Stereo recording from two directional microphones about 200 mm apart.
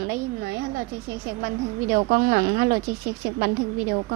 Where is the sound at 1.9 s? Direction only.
50° right (ahead or behind).